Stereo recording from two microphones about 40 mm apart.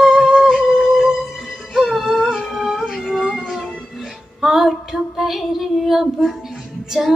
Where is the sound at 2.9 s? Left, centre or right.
Centre.